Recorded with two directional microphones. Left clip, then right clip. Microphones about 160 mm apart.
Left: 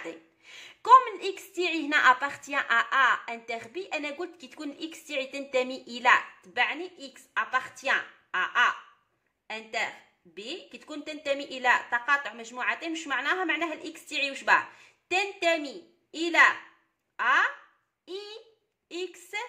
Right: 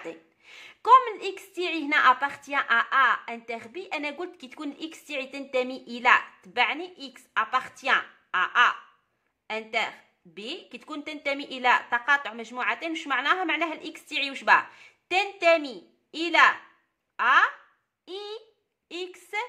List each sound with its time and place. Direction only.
0.0 s a woman's voice: 20° right (ahead or behind)
6.5 s a woman's voice: 35° right (ahead or behind)